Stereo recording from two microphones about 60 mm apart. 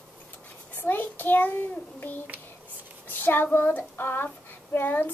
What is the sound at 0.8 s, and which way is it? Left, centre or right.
Speech, left.